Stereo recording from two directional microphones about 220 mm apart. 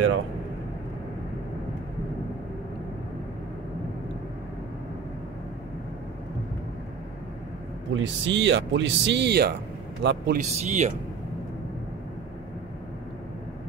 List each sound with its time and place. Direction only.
7.9 s a man's voice: 55° right (ahead or behind)
10.5 s speech: 30° right (ahead or behind)